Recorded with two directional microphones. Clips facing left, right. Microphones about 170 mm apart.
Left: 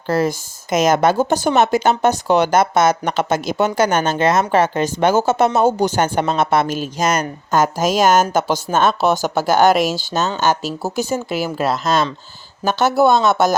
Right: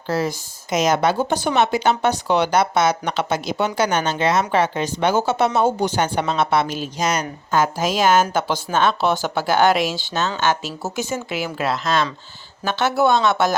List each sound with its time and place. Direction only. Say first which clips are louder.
0.1 s speech: left 4 dB; 50° left (ahead or behind)